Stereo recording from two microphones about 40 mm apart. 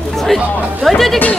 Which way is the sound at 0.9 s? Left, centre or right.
Centre.